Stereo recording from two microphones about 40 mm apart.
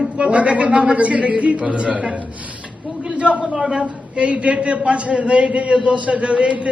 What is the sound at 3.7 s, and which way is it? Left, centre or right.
A man's voice, right.